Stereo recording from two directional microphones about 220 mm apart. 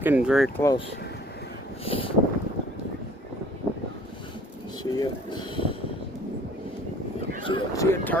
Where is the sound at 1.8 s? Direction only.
25° left (ahead or behind).